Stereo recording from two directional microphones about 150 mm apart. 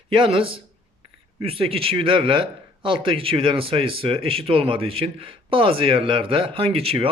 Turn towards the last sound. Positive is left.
turn(degrees=-40)  # may be behind; listen again after turning